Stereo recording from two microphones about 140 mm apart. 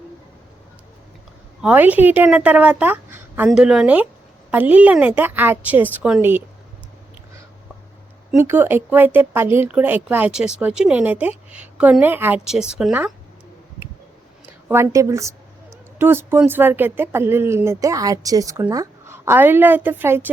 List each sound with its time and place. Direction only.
1.6 s speech: 10° right (ahead or behind)
8.4 s speech: 15° right (ahead or behind)
14.7 s a woman's voice: 20° right (ahead or behind)